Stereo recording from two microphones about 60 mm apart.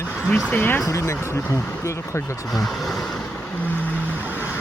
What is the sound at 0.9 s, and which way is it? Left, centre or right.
Speech, left.